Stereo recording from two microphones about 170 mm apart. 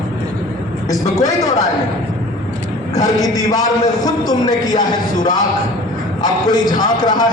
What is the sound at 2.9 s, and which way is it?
A man's voice, 20° left (ahead or behind).